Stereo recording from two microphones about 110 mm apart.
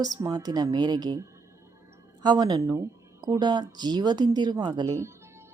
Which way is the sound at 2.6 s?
30° right (ahead or behind).